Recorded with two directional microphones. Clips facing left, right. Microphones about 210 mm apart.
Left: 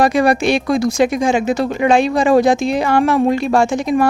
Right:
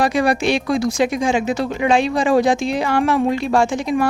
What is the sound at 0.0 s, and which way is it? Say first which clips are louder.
Speech: left 3 dB; 45° left (ahead or behind).